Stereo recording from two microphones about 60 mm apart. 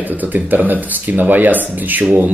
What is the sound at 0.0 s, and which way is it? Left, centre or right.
Speech, right.